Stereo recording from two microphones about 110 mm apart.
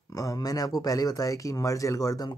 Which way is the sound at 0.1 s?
30° left (ahead or behind).